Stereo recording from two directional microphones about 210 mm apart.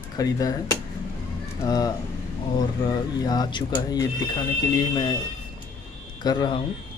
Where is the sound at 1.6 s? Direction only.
20° left (ahead or behind).